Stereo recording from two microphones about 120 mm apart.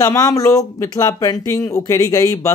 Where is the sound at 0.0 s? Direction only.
25° left (ahead or behind).